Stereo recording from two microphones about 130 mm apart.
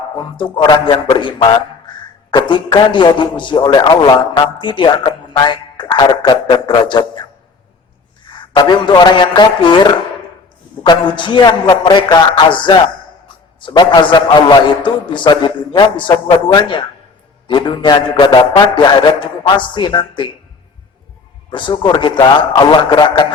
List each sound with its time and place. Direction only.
0.3 s a man's voice: 35° left (ahead or behind)
21.5 s a man's voice: 40° left (ahead or behind)